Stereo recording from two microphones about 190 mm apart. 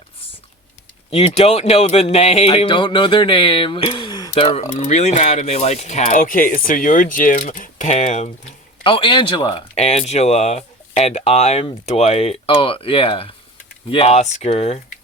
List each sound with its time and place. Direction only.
1.1 s speech: 35° left (ahead or behind)
4.8 s speech: 35° left (ahead or behind)
8.8 s speech: 25° left (ahead or behind)